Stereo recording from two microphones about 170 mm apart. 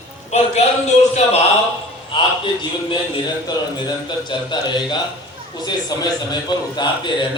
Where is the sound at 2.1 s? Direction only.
30° left (ahead or behind).